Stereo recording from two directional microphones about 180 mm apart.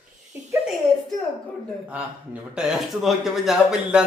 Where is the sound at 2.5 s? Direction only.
5° right (ahead or behind).